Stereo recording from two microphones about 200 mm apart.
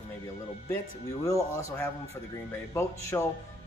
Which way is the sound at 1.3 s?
15° left (ahead or behind).